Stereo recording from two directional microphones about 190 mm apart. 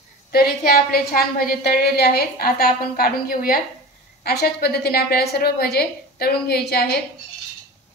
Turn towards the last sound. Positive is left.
turn(degrees=55)  # may be behind; listen again after turning